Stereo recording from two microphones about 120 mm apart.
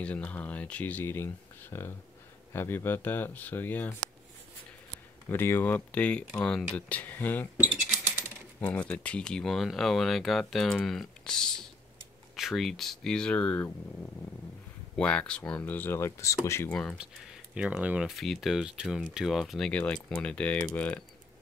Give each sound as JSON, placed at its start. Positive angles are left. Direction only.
{"t": 0.0, "sound": "speech", "side_deg": 10}
{"t": 5.3, "sound": "speech", "side_deg": 20}
{"t": 8.5, "sound": "speech", "side_deg": 10}
{"t": 15.0, "sound": "speech", "side_deg": 10}
{"t": 16.6, "sound": "speech", "side_deg": 10}
{"t": 16.9, "sound": "speech", "side_deg": -5}
{"t": 18.1, "sound": "speech", "side_deg": 0}
{"t": 19.7, "sound": "speech", "side_deg": 10}